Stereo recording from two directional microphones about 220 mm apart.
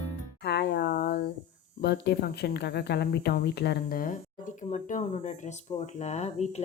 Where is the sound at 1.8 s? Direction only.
50° left (ahead or behind).